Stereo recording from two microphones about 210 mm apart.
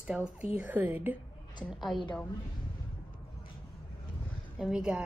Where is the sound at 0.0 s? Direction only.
5° right (ahead or behind).